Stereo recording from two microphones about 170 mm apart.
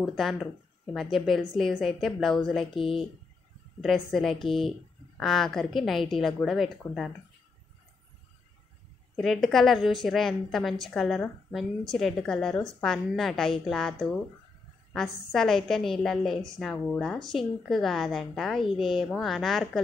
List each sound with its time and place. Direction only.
0.0 s a woman's voice: centre (ahead or behind)
2.7 s speech: 30° left (ahead or behind)
3.8 s a woman's voice: centre (ahead or behind)
9.1 s a woman's voice: centre (ahead or behind)